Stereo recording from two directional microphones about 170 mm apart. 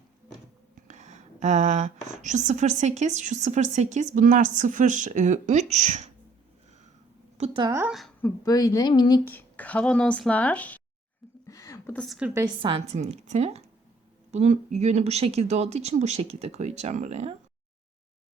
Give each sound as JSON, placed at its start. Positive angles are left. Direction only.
{"t": 0.9, "sound": "speech", "side_deg": -45}
{"t": 7.3, "sound": "a woman's voice", "side_deg": -35}
{"t": 7.6, "sound": "a woman's voice", "side_deg": -15}
{"t": 7.9, "sound": "a woman's voice", "side_deg": 0}
{"t": 8.4, "sound": "speech", "side_deg": 20}
{"t": 9.2, "sound": "speech", "side_deg": 10}
{"t": 11.4, "sound": "a sound", "side_deg": 20}
{"t": 11.9, "sound": "a woman's voice", "side_deg": 0}
{"t": 12.6, "sound": "speech", "side_deg": -35}